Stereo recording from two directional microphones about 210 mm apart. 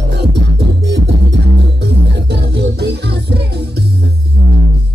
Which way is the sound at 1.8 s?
50° right (ahead or behind).